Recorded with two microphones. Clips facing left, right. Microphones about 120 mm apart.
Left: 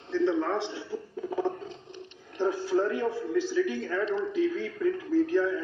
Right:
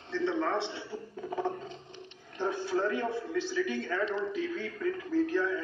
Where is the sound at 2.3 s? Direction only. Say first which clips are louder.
Left 5 dB; 5° left (ahead or behind).